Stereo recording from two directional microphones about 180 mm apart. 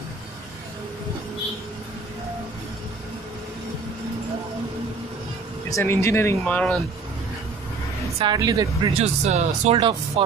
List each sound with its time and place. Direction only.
5.7 s speech: 15° left (ahead or behind)
8.2 s speech: 20° right (ahead or behind)
9.0 s speech: 40° right (ahead or behind)